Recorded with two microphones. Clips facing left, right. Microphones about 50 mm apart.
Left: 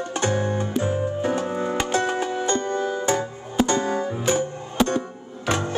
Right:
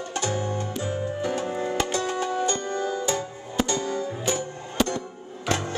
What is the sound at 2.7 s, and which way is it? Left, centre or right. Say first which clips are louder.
Music: left 3 dB; left.